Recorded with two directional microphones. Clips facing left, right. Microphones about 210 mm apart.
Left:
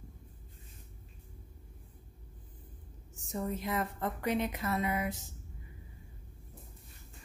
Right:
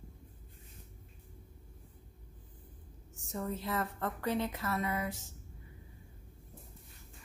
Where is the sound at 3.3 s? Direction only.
15° left (ahead or behind).